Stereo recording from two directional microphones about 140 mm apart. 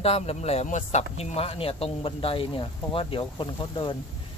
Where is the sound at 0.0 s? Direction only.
45° left (ahead or behind).